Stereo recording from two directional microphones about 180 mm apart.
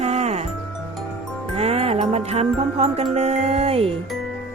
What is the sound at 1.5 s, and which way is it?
Music, 35° right (ahead or behind).